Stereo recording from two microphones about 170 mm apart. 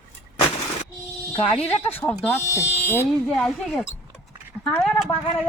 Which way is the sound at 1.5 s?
40° left (ahead or behind).